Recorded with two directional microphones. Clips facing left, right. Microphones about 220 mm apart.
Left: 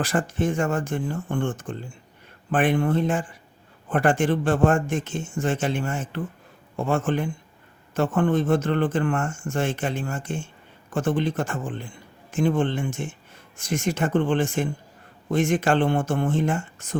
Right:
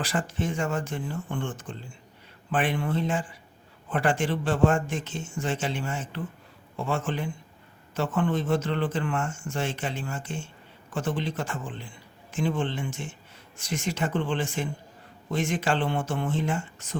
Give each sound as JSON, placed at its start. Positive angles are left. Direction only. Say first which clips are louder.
{"t": 0.0, "sound": "speech", "louder": "left 5 dB", "side_deg": 50}